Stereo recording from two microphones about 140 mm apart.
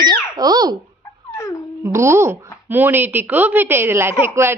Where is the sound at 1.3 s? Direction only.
20° left (ahead or behind).